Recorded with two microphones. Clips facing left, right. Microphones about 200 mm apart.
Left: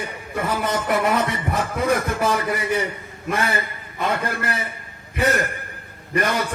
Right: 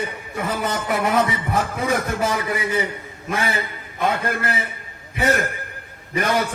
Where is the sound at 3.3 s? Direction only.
55° left (ahead or behind).